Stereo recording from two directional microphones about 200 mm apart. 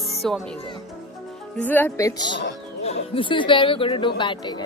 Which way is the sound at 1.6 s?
10° left (ahead or behind).